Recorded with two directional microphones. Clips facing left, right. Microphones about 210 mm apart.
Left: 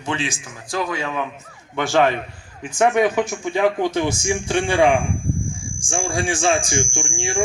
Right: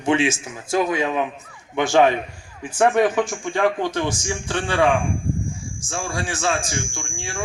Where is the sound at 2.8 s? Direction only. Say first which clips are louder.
Even; centre (ahead or behind).